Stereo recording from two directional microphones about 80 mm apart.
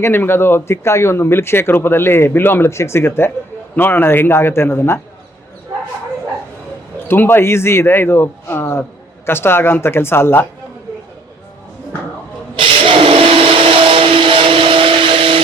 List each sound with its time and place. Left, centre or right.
0.0 s a man's voice: left
7.1 s a man's voice: left
12.5 s blender: right